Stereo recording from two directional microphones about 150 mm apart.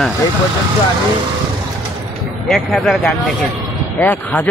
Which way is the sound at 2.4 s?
Centre (ahead or behind).